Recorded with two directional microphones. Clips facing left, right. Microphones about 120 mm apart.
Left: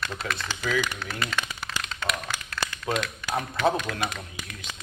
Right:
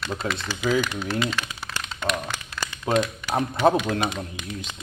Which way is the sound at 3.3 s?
35° right (ahead or behind).